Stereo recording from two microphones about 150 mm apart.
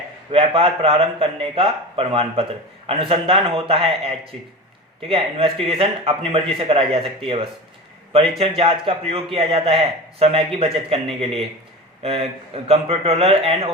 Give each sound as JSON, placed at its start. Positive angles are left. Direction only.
{"t": 0.3, "sound": "a man's voice", "side_deg": -35}